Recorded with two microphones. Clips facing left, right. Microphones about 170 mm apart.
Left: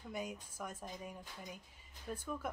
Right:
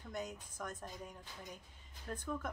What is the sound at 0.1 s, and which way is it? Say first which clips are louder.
Speech: even; 10° left (ahead or behind).